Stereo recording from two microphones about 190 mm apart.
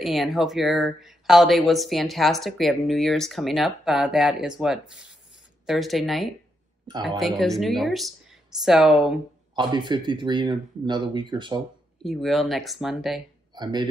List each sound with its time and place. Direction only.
0.0 s speech: centre (ahead or behind)
9.6 s speech: 25° right (ahead or behind)
12.0 s speech: centre (ahead or behind)
13.6 s a man's voice: 20° right (ahead or behind)